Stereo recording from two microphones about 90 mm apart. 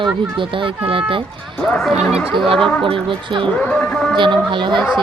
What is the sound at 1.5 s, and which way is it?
Speech, 5° left (ahead or behind).